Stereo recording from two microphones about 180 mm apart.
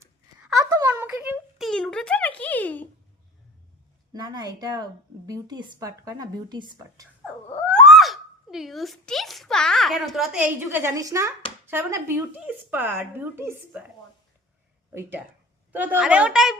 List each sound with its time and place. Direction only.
0.5 s a sound: 20° right (ahead or behind); by 2.9 s 10° left (ahead or behind)
4.1 s a woman's voice: 20° right (ahead or behind)
7.5 s a woman's voice: 5° left (ahead or behind)
15.7 s a woman's voice: 10° right (ahead or behind)